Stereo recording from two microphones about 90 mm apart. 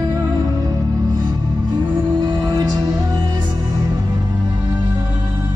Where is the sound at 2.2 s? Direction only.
55° right (ahead or behind).